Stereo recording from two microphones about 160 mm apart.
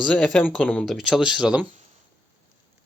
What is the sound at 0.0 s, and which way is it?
Speech, centre (ahead or behind).